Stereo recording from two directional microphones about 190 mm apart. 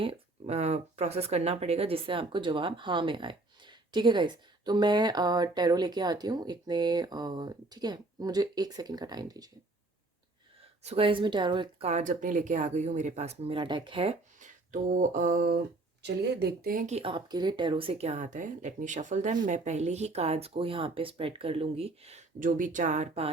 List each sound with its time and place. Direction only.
0.0 s speech: 30° right (ahead or behind)
10.6 s speech: 30° right (ahead or behind)
11.9 s speech: 40° right (ahead or behind)
14.3 s speech: 40° right (ahead or behind)
16.0 s speech: 60° right (ahead or behind); by 23.3 s 35° right (ahead or behind)